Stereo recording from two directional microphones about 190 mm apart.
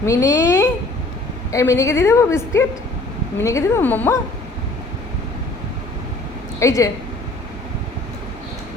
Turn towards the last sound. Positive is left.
turn(degrees=15)  # may be behind; listen again after turning